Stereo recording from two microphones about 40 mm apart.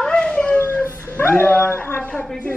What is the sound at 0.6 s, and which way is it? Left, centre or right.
Dog, left.